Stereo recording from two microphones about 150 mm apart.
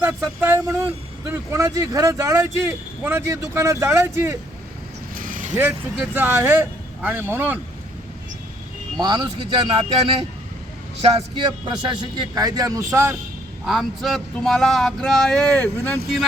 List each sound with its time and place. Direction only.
0.0 s speech: 15° right (ahead or behind)
5.1 s vehicle: 65° right (ahead or behind)
5.5 s speech: 15° right (ahead or behind)
9.0 s speech: 30° right (ahead or behind)
13.7 s a sound: centre (ahead or behind)